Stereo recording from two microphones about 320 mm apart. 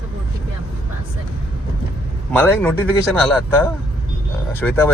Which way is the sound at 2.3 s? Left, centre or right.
Centre.